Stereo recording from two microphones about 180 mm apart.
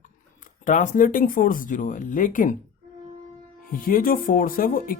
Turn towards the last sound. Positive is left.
turn(degrees=50)  # may be behind; listen again after turning